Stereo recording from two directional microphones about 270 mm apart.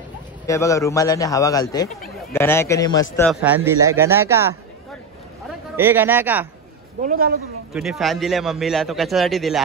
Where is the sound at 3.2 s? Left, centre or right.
Centre.